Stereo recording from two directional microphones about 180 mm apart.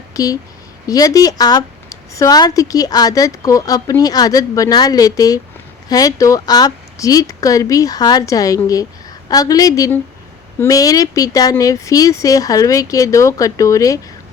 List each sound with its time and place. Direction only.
0.1 s speech: 20° left (ahead or behind)